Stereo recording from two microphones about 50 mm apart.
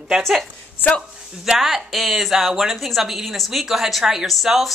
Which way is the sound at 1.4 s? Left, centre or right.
Centre.